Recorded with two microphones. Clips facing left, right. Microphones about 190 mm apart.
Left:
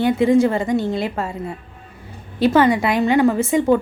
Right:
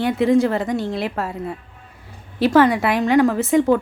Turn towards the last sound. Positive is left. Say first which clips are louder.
# even
turn(degrees=0)  # may be behind; listen again after turning